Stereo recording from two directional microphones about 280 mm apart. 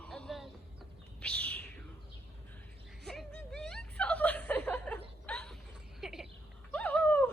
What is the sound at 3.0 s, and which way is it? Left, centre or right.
Chuckle, centre.